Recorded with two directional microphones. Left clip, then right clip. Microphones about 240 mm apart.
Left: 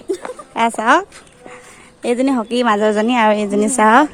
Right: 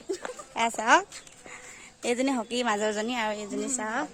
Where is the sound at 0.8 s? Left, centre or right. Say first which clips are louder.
Left 6 dB; centre; by 4.1 s left.